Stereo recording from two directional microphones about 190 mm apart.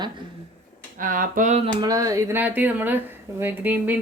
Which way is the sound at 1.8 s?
20° right (ahead or behind).